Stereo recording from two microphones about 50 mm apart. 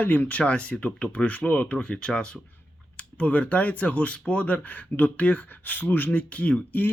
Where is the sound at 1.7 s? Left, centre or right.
Centre.